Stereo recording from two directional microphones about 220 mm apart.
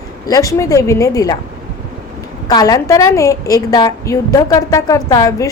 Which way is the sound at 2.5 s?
15° left (ahead or behind).